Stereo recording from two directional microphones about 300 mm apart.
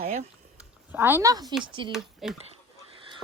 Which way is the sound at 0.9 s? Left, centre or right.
Centre.